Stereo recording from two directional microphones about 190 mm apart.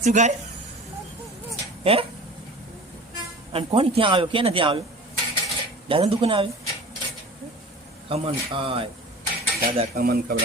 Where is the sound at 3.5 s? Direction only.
30° right (ahead or behind).